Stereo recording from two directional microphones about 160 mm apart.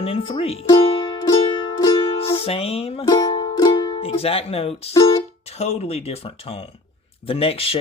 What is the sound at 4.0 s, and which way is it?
Speech, 35° left (ahead or behind).